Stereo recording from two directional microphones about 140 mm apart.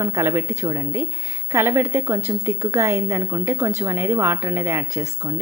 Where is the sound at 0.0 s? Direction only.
20° right (ahead or behind).